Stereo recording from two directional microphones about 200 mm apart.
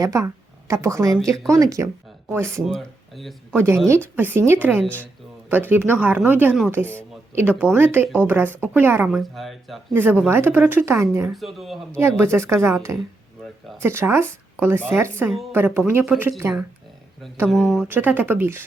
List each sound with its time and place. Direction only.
0.0 s a woman's voice: 15° right (ahead or behind)
2.6 s speech: centre (ahead or behind)
3.5 s a woman's voice: 15° right (ahead or behind)
4.8 s speech: 10° left (ahead or behind)
5.5 s a woman's voice: 10° right (ahead or behind)
11.3 s speech: centre (ahead or behind)
11.9 s a woman's voice: 10° right (ahead or behind)